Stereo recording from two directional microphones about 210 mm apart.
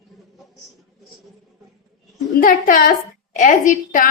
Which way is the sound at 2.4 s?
40° left (ahead or behind).